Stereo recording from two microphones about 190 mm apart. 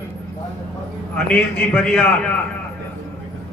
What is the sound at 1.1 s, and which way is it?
Speech, 10° left (ahead or behind).